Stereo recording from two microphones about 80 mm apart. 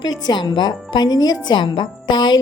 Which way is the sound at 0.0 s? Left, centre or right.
Left.